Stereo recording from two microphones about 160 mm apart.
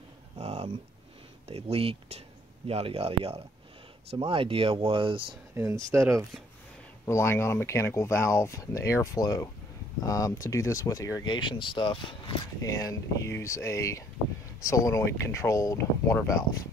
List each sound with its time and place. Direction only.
0.4 s a sound: 40° right (ahead or behind)
1.5 s speech: 35° right (ahead or behind)
5.5 s speech: 20° right (ahead or behind)
7.1 s speech: 15° left (ahead or behind)